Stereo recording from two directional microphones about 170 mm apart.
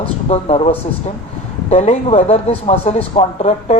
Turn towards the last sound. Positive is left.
turn(degrees=40)  # may be behind; listen again after turning